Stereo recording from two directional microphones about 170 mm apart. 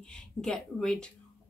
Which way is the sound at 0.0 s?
5° left (ahead or behind).